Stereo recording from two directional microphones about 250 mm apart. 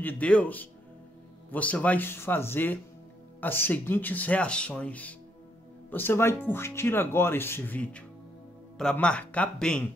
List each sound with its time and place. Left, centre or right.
0.0 s speech: centre